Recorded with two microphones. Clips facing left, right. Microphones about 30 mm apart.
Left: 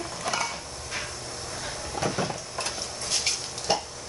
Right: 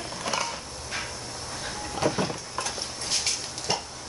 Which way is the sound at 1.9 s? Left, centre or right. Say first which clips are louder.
Right 2 dB; centre.